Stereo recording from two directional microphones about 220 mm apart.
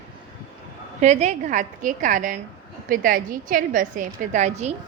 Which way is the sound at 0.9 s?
30° right (ahead or behind).